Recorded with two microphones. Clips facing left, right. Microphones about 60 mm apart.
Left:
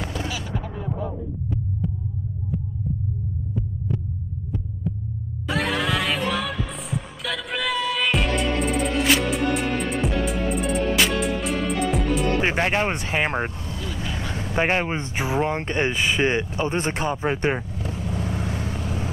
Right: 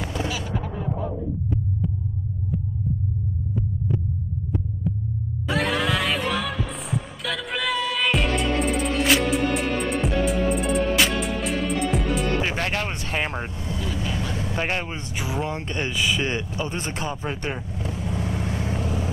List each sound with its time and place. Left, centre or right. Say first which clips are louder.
0.1 s a sound: right 2 dB; right
1.0 s heart sounds: right 2 dB; centre
3.5 s hum: right 2 dB; centre
4.9 s heart sounds: even; centre
12.4 s music: left 4 dB; left
13.7 s vehicle: right 2 dB; right
14.0 s speech: right 1 dB; left
17.8 s vehicle: right 3 dB; right
18.2 s vehicle: even; left
18.6 s vehicle: right 2 dB; right